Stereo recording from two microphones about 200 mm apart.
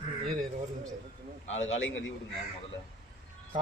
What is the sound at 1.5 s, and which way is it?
Speech, 70° left (ahead or behind).